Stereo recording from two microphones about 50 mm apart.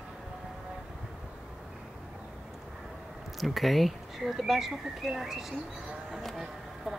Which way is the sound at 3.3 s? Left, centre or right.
Centre.